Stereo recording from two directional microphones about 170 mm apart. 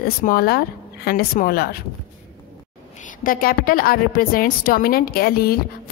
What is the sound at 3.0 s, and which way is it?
A woman's voice, 55° left (ahead or behind).